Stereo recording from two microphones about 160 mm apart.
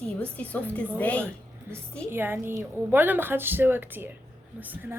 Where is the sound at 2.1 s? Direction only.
15° right (ahead or behind).